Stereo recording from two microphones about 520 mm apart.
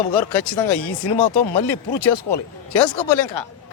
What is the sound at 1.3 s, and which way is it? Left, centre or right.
Speech, left.